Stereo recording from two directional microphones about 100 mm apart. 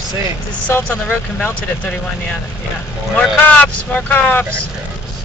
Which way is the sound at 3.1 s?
10° left (ahead or behind).